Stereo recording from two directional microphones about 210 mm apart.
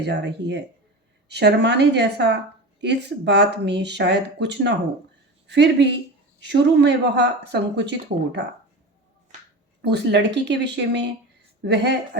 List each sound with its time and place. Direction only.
0.0 s a woman's voice: 55° right (ahead or behind)
9.8 s speech: 55° right (ahead or behind)